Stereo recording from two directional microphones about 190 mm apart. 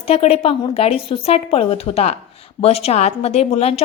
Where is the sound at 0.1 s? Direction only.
30° left (ahead or behind).